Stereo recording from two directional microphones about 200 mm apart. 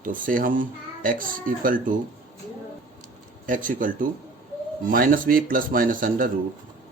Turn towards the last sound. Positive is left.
turn(degrees=-45)  # may be behind; listen again after turning